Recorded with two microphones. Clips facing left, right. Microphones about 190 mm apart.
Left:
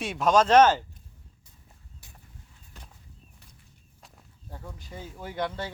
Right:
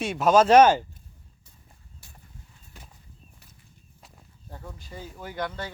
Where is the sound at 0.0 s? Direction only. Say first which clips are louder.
Right 3 dB; centre (ahead or behind).